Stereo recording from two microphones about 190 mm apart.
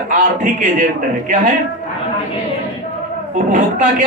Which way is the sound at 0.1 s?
45° right (ahead or behind).